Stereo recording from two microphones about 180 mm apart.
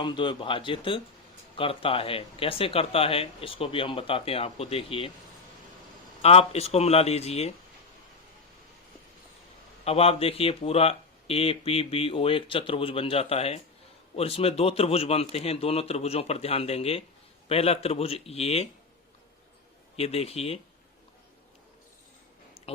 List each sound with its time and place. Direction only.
0.0 s speech: 25° left (ahead or behind)
6.2 s speech: 35° left (ahead or behind)
9.8 s speech: 35° left (ahead or behind)
20.0 s speech: 35° left (ahead or behind)